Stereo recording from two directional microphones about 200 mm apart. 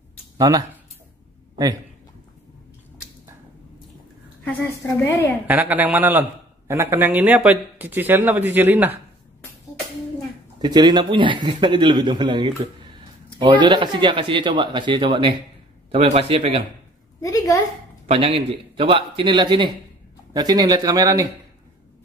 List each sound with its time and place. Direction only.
0.4 s a man's voice: 15° right (ahead or behind)
4.5 s a woman's voice: 15° left (ahead or behind)
5.5 s a man's voice: 10° right (ahead or behind)
10.6 s a man's voice: 20° right (ahead or behind)
17.2 s a woman's voice: 15° left (ahead or behind)
18.0 s a man's voice: 30° right (ahead or behind)